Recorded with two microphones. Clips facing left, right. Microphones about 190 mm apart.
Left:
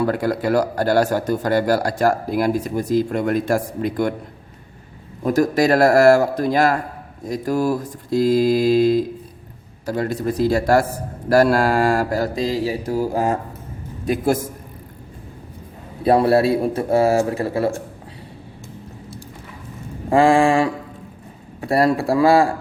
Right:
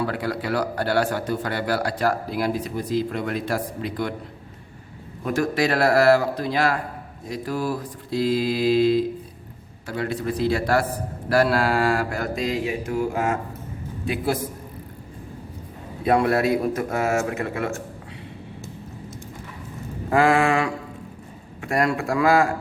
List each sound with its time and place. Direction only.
0.0 s a man's voice: 45° left (ahead or behind)
5.2 s a man's voice: 40° left (ahead or behind)
14.0 s a man's voice: 45° left (ahead or behind)
16.0 s speech: 30° left (ahead or behind)
20.1 s mantra: 30° left (ahead or behind)
21.6 s speech: 35° left (ahead or behind)